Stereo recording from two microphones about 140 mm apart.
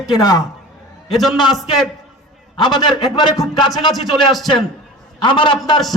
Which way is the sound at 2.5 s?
30° left (ahead or behind).